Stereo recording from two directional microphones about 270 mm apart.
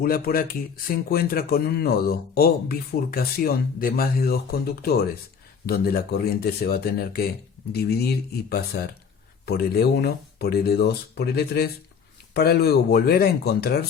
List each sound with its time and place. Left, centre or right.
0.0 s speech: left